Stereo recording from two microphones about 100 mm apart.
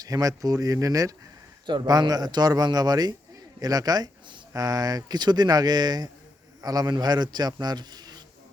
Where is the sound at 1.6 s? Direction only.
50° right (ahead or behind).